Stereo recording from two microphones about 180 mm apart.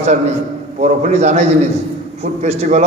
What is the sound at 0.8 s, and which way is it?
A man's voice, 40° right (ahead or behind).